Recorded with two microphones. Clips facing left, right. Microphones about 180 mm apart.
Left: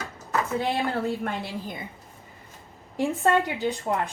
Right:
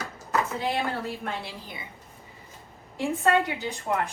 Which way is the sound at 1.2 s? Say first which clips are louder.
Left 4 dB; 50° left (ahead or behind).